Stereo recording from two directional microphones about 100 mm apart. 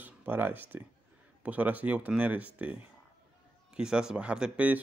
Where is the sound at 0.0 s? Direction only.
20° right (ahead or behind).